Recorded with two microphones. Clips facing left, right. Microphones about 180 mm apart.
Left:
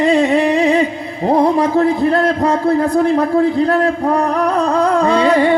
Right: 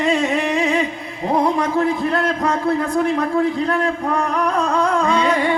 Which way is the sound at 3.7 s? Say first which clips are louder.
Left 5 dB; 35° left (ahead or behind).